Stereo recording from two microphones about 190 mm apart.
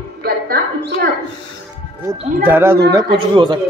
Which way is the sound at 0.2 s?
55° right (ahead or behind).